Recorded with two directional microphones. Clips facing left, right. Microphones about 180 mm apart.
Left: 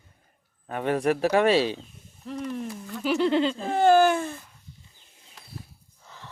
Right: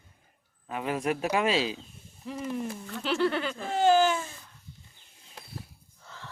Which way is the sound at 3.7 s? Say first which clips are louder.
Left 3 dB; 55° left (ahead or behind).